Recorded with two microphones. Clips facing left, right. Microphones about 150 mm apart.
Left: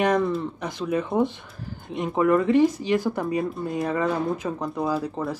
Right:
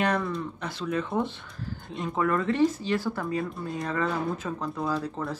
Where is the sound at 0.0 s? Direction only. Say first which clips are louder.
Left 5 dB; 15° left (ahead or behind).